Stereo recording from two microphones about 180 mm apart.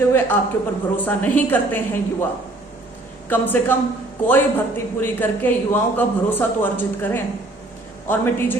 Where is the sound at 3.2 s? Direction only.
10° left (ahead or behind).